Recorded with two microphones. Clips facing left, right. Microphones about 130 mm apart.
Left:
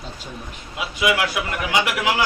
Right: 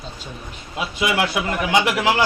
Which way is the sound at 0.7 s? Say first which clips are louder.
Even; 30° right (ahead or behind).